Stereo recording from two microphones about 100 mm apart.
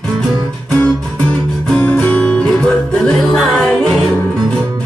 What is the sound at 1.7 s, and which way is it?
Music, 15° left (ahead or behind).